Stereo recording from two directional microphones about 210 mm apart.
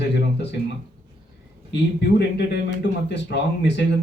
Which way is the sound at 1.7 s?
55° left (ahead or behind).